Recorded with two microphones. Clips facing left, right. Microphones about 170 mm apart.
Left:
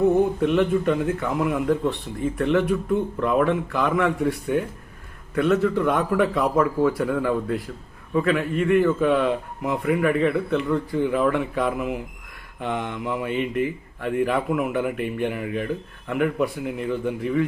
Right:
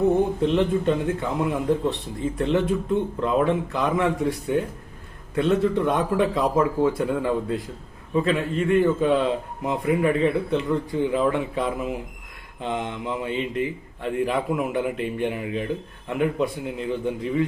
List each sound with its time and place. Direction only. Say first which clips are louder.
0.4 s speech: left 1 dB; 25° right (ahead or behind)